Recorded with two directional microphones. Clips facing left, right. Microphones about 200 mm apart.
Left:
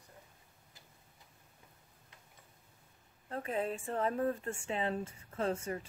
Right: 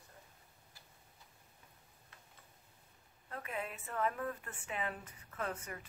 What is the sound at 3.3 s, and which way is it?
Speech, 30° left (ahead or behind).